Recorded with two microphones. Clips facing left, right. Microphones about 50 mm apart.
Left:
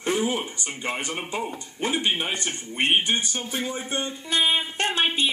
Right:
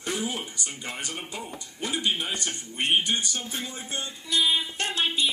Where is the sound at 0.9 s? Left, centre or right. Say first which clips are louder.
Left 8 dB; left.